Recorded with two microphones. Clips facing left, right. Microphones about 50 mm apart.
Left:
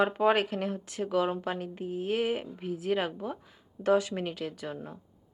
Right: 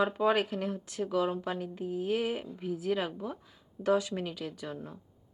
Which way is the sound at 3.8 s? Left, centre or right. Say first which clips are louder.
Left 2 dB; left.